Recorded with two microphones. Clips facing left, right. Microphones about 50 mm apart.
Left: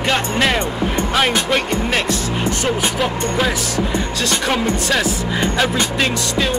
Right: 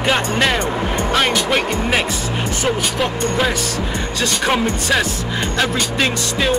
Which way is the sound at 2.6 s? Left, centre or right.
Centre.